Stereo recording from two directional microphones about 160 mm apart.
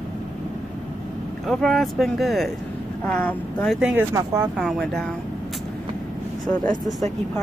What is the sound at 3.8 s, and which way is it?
Speech, 15° right (ahead or behind).